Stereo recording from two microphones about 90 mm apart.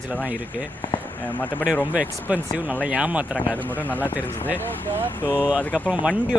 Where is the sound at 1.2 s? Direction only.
20° left (ahead or behind).